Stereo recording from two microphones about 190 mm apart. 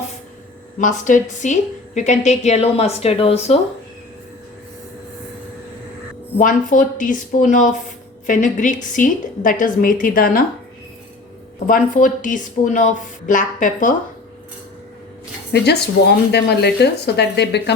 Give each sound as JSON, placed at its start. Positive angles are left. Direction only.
{"t": 0.8, "sound": "a woman's voice", "side_deg": 40}
{"t": 6.3, "sound": "speech", "side_deg": 45}
{"t": 11.6, "sound": "speech", "side_deg": 45}
{"t": 15.5, "sound": "speech", "side_deg": 60}